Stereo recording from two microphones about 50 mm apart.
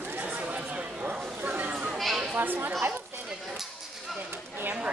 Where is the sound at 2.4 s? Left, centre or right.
Right.